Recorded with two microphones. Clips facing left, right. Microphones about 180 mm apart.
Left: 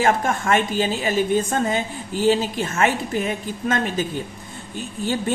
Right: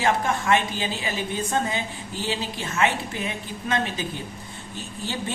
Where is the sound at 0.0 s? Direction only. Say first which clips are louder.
Left 3 dB; 50° left (ahead or behind).